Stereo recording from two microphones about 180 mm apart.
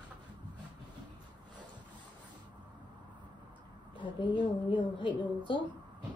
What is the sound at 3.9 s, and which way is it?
A woman's voice, 25° left (ahead or behind).